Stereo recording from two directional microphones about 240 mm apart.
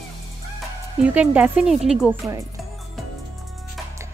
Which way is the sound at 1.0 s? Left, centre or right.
Centre.